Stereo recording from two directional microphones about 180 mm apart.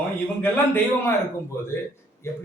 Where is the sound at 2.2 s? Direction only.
15° left (ahead or behind).